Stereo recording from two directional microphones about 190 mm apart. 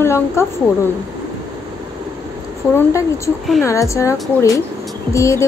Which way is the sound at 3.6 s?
15° left (ahead or behind).